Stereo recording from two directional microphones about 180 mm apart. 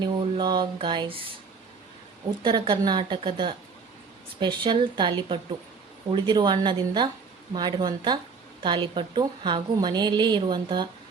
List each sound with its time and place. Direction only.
0.0 s a woman's voice: 25° right (ahead or behind)
2.4 s a woman's voice: 25° right (ahead or behind)